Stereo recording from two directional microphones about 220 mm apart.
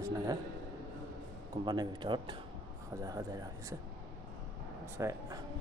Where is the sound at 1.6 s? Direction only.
20° right (ahead or behind).